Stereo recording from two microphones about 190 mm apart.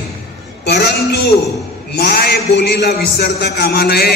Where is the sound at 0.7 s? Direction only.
60° left (ahead or behind).